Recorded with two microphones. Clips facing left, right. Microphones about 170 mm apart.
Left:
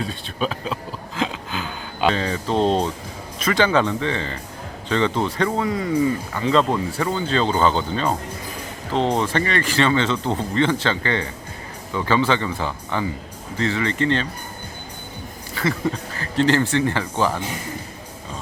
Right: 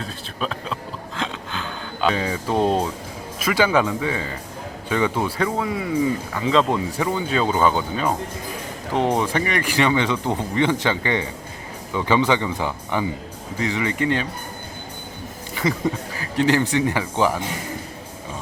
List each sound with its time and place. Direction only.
0.0 s a sound: centre (ahead or behind)
2.1 s speech: 10° right (ahead or behind)
6.7 s speech: 10° right (ahead or behind)
16.1 s speech: 10° right (ahead or behind)